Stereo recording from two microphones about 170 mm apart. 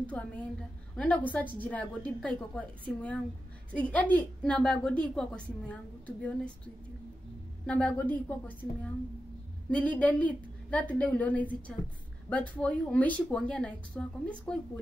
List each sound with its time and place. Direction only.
0.0 s a woman's voice: 10° left (ahead or behind)
7.6 s a woman's voice: 10° left (ahead or behind)
9.7 s a woman's voice: 10° left (ahead or behind)